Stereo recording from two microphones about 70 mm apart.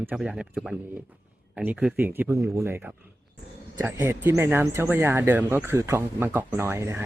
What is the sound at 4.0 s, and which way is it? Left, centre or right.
Speech, right.